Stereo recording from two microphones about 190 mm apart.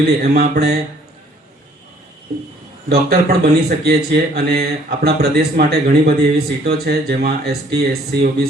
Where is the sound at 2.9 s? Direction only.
55° right (ahead or behind).